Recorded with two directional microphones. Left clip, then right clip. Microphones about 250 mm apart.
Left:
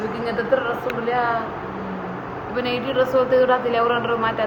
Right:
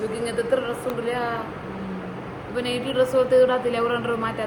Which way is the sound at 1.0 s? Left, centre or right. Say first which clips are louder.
Left 6 dB; right.